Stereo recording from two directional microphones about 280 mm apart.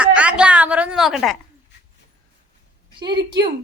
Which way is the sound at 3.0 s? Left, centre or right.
Centre.